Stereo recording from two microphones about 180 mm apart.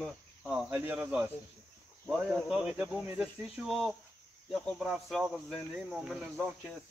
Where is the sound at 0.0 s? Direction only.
5° right (ahead or behind).